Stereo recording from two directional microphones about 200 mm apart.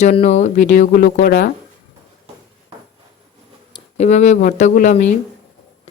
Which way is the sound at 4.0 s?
35° left (ahead or behind).